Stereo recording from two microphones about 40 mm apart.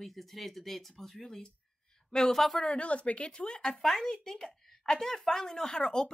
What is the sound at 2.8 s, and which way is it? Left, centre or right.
Speech, left.